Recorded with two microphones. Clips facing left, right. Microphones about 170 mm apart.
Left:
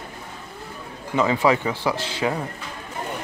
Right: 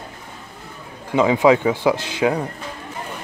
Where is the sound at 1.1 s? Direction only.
15° right (ahead or behind).